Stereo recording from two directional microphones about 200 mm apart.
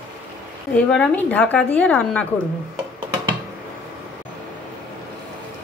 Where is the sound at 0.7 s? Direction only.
5° left (ahead or behind).